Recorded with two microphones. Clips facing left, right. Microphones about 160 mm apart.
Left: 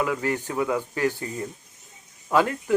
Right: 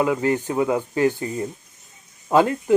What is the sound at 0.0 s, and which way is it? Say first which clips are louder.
Speech: right 5 dB; 25° right (ahead or behind).